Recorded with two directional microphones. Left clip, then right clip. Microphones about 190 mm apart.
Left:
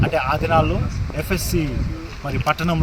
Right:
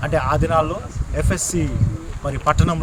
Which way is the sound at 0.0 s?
20° right (ahead or behind).